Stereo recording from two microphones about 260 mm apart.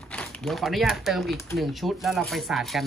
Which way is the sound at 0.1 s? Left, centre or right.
Centre.